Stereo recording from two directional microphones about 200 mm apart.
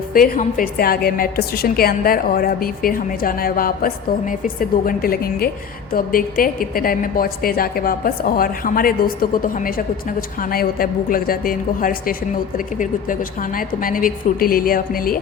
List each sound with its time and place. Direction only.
0.1 s a woman's voice: 45° left (ahead or behind)